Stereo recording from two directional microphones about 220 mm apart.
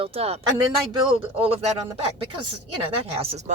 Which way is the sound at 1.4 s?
25° right (ahead or behind).